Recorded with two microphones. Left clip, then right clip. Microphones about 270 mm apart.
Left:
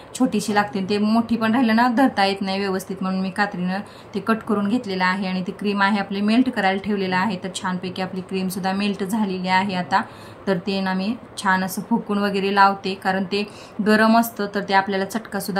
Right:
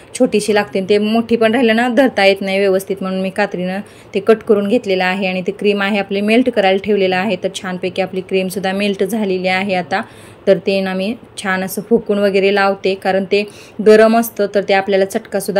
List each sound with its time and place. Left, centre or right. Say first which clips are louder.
0.3 s speech: right 7 dB; centre